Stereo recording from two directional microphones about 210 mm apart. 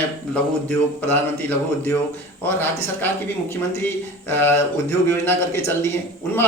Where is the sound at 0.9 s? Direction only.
10° left (ahead or behind).